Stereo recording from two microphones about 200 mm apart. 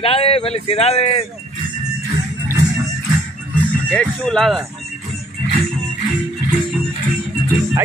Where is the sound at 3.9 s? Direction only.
5° left (ahead or behind).